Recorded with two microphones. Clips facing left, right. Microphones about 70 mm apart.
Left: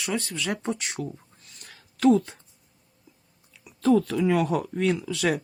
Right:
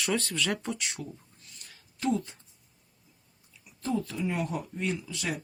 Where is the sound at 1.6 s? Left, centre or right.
Left.